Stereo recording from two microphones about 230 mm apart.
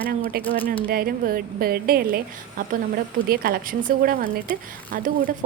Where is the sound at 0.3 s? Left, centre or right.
Right.